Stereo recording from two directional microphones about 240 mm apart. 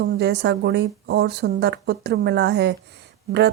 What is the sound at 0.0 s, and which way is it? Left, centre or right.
Speech, right.